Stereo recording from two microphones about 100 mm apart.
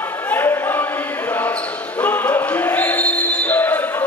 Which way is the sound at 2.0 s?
15° left (ahead or behind).